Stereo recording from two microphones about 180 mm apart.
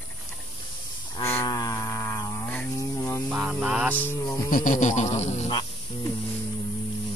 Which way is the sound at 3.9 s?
10° left (ahead or behind).